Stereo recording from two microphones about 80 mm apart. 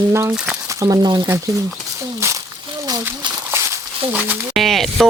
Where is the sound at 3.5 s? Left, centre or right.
Right.